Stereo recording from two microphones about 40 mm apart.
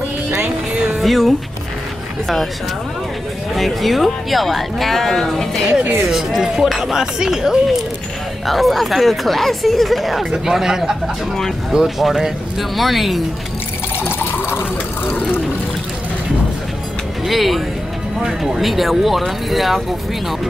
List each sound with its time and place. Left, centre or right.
1.0 s speech: centre
3.5 s speech: centre
6.0 s speech: centre
8.5 s speech: centre
13.9 s a sound: left
17.3 s speech: centre